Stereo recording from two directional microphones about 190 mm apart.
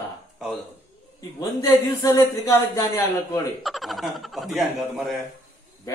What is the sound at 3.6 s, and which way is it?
Speech, centre (ahead or behind).